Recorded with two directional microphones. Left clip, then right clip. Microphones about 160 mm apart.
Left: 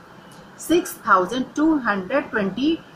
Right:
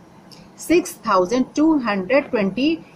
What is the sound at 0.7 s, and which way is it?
A woman's voice, 40° right (ahead or behind).